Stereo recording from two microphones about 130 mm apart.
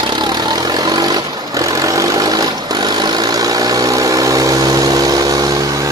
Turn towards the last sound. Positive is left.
turn(degrees=-25)  # may be behind; listen again after turning